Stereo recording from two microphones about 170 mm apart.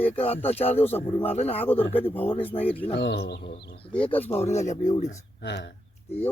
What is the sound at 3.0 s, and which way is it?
Speech, 85° left.